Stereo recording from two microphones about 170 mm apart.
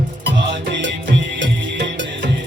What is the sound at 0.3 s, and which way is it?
Music, 90° right.